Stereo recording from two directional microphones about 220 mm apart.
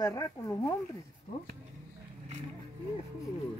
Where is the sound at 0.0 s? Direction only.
15° left (ahead or behind).